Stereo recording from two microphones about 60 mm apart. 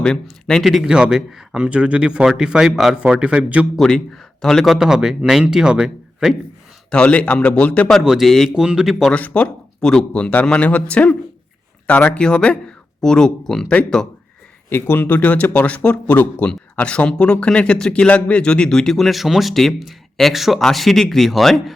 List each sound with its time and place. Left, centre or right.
0.0 s speech: centre
0.6 s speech: centre
3.8 s speech: centre
6.9 s a man's voice: left
8.0 s speech: centre
9.1 s a man's voice: left
9.8 s speech: centre
10.1 s a man's voice: left
12.2 s speech: centre
14.7 s a man's voice: left
16.5 s speech: centre